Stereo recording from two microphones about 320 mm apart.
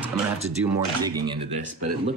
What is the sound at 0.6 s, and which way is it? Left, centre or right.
Speech, centre.